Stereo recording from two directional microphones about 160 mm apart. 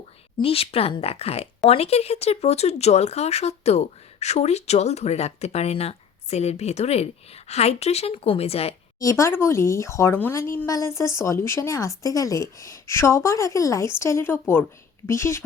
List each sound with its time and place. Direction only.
0.4 s speech: 35° left (ahead or behind)
9.0 s speech: 20° left (ahead or behind)